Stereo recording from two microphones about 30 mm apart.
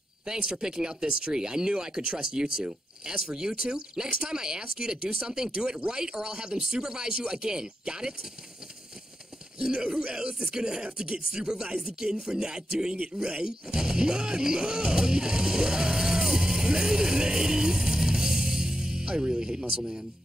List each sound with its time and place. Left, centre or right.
0.2 s speech: right
9.6 s speech: right